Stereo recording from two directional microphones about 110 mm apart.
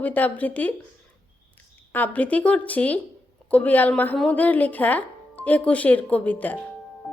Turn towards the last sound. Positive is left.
turn(degrees=15)  # may be behind; listen again after turning